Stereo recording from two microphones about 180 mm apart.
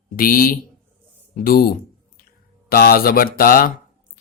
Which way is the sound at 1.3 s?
55° left (ahead or behind).